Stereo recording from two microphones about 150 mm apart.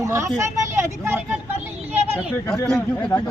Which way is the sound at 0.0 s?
20° right (ahead or behind).